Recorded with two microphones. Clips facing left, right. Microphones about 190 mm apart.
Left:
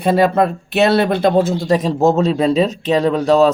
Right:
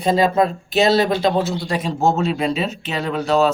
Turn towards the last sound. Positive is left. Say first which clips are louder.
# left 5 dB
turn(degrees=35)  # may be behind; listen again after turning